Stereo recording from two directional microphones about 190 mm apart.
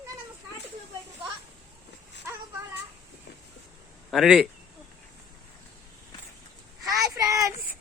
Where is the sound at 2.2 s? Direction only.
15° right (ahead or behind).